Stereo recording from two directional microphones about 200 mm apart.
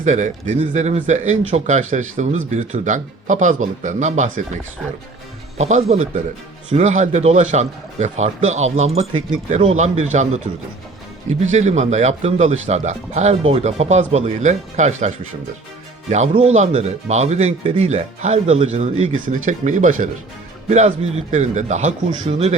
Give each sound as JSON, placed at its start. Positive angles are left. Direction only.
{"t": 0.0, "sound": "speech", "side_deg": -35}
{"t": 5.5, "sound": "speech", "side_deg": -35}
{"t": 11.5, "sound": "speech", "side_deg": -35}